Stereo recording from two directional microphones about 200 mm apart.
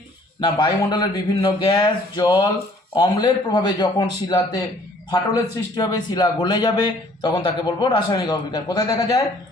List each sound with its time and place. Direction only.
0.3 s a man's voice: 20° left (ahead or behind)